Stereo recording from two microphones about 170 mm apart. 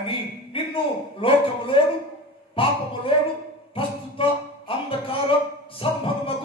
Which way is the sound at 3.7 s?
30° left (ahead or behind).